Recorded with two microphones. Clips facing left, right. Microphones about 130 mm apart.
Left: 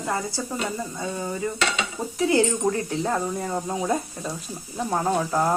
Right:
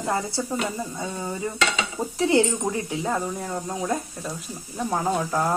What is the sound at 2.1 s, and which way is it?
Speech, 25° right (ahead or behind).